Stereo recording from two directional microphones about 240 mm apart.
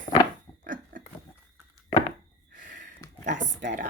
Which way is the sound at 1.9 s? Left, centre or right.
Left.